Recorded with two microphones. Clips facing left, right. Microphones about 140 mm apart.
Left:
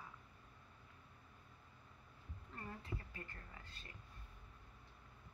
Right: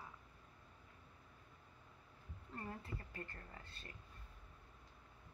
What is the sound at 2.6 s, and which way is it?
A woman's voice, 30° right (ahead or behind).